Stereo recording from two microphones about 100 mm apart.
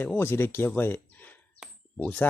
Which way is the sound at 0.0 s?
20° left (ahead or behind).